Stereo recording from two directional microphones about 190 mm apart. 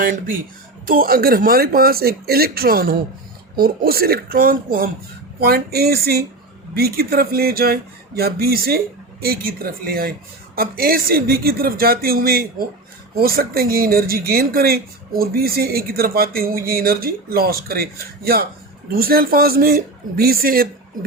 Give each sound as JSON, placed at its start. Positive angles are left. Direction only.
{"t": 0.0, "sound": "speech", "side_deg": -45}
{"t": 5.4, "sound": "a sound", "side_deg": -55}
{"t": 6.7, "sound": "speech", "side_deg": -55}